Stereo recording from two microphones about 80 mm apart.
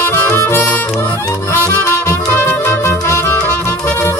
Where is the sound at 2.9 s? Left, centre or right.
Left.